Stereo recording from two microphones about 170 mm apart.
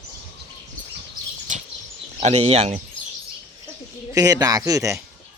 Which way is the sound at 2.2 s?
40° right (ahead or behind).